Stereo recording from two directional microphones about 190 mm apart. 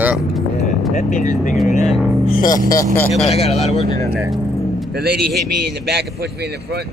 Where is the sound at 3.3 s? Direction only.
35° left (ahead or behind).